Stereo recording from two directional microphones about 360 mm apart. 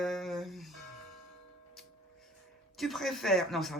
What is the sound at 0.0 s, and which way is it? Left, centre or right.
Music, centre.